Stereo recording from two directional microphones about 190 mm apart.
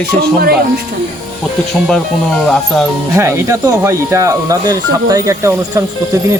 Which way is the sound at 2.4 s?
5° left (ahead or behind).